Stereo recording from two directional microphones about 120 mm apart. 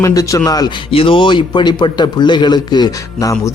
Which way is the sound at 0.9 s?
50° left (ahead or behind).